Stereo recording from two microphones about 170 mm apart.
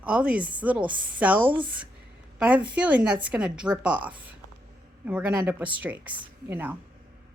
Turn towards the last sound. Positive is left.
turn(degrees=-10)  # may be behind; listen again after turning